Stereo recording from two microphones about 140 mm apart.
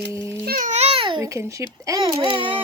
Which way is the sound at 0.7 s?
50° right (ahead or behind).